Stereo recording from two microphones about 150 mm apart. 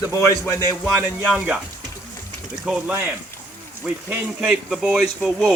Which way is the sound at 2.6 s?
5° right (ahead or behind).